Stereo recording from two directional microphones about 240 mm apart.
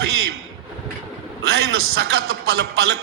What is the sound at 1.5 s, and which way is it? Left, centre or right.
A man's voice, right.